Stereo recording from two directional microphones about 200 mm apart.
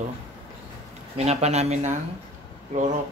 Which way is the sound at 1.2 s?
35° right (ahead or behind).